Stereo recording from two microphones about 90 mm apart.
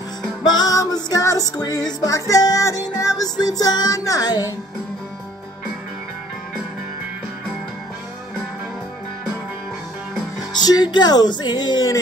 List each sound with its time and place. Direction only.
0.4 s music: 45° left (ahead or behind)
10.6 s music: 50° left (ahead or behind)